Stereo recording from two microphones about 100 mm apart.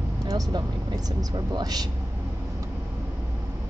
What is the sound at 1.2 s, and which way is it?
Speech, 45° right (ahead or behind).